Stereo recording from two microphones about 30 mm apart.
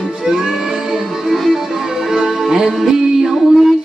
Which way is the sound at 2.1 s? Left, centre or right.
Centre.